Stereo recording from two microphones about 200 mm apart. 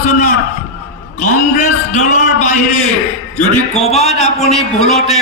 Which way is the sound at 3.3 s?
35° left (ahead or behind).